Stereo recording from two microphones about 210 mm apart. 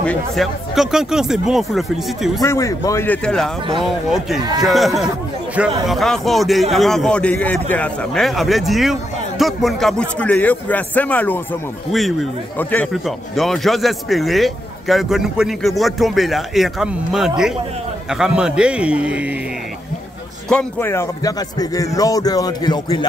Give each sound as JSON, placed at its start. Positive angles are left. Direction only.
{"t": 0.0, "sound": "speech", "side_deg": 5}
{"t": 2.4, "sound": "speech", "side_deg": 15}
{"t": 4.6, "sound": "speech", "side_deg": 0}
{"t": 20.4, "sound": "speech", "side_deg": 10}